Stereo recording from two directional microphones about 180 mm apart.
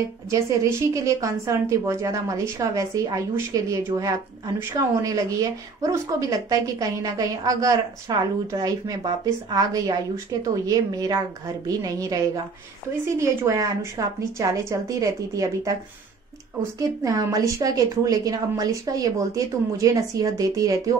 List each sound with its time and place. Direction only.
0.3 s a woman's voice: 15° right (ahead or behind)
16.7 s speech: 20° right (ahead or behind)